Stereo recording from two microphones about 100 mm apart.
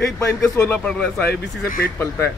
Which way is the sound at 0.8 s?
10° left (ahead or behind).